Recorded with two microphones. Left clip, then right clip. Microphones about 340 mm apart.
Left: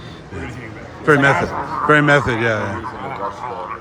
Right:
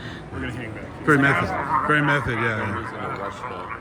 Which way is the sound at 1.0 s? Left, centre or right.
Centre.